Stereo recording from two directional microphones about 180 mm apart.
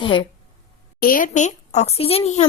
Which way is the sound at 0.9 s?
50° left (ahead or behind).